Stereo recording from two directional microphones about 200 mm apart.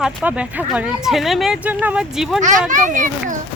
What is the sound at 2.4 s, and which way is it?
Speech, 40° right (ahead or behind).